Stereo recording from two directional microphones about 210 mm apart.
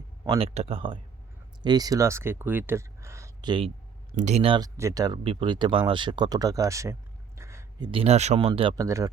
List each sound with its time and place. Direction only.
0.3 s speech: 25° right (ahead or behind)
4.1 s speech: 35° right (ahead or behind); by 6.9 s 15° right (ahead or behind)
7.3 s a sound: 15° right (ahead or behind)
7.9 s speech: 30° right (ahead or behind)